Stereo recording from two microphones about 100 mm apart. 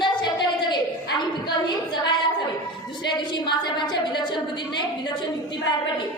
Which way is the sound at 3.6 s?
50° left (ahead or behind).